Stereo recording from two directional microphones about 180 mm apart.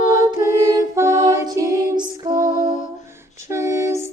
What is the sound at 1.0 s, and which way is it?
Music, 15° right (ahead or behind).